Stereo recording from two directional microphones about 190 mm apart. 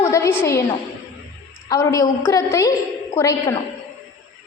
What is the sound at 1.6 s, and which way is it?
A woman's voice, 20° left (ahead or behind).